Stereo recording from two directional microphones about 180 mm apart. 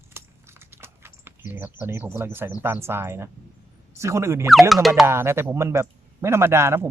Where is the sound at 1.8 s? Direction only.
15° right (ahead or behind).